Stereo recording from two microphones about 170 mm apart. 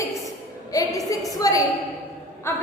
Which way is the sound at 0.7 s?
20° left (ahead or behind).